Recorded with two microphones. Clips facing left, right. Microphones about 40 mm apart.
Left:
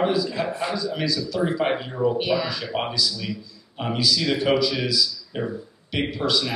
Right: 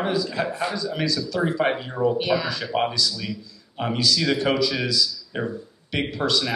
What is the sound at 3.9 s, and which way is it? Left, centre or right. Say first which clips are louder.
A woman's voice: even; centre.